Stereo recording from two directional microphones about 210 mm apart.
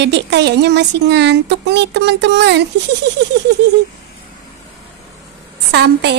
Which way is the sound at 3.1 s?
55° right (ahead or behind).